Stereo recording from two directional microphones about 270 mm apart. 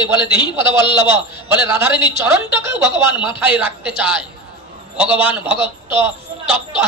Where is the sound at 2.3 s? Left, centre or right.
Centre.